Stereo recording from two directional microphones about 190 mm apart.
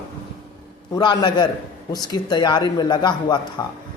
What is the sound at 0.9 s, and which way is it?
A man's voice, 20° left (ahead or behind).